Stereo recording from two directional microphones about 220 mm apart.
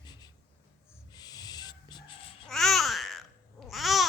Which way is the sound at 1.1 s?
15° left (ahead or behind).